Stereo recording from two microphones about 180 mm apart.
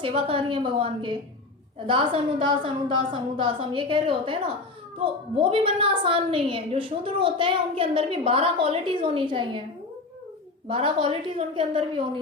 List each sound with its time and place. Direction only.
0.0 s a woman's voice: 30° right (ahead or behind)
10.7 s a woman's voice: 30° right (ahead or behind)